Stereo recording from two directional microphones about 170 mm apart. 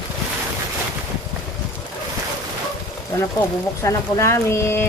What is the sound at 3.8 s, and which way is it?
Speech, 15° left (ahead or behind).